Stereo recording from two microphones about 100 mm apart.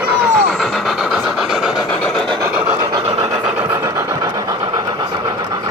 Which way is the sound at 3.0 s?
90° right.